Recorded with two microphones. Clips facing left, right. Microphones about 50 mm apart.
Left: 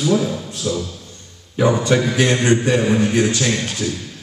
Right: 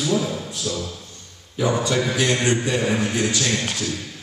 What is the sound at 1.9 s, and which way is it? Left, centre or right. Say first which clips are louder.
Speech: left 5 dB; left.